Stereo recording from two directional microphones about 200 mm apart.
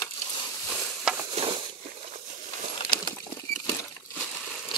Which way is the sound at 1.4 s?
30° right (ahead or behind).